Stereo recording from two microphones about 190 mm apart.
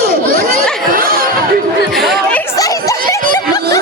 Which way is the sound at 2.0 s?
Centre (ahead or behind).